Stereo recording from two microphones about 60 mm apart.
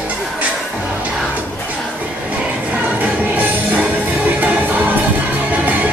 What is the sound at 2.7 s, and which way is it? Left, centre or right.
Music, right.